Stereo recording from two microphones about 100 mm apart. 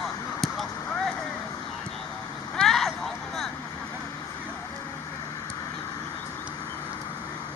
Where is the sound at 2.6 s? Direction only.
Centre (ahead or behind).